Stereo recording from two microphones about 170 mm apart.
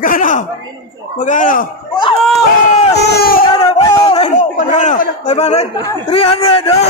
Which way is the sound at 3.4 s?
35° left (ahead or behind).